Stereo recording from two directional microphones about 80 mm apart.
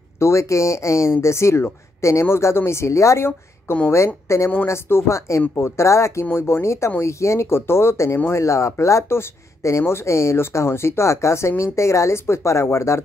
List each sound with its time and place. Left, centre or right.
0.2 s speech: left